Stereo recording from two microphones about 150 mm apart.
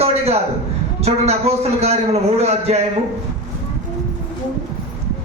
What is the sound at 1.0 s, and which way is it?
A man's voice, 45° right (ahead or behind).